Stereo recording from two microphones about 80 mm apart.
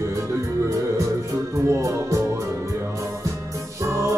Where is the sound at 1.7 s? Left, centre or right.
Right.